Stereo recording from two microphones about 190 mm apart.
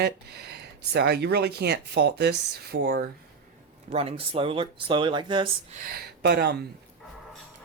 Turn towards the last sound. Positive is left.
turn(degrees=-60)  # may be behind; listen again after turning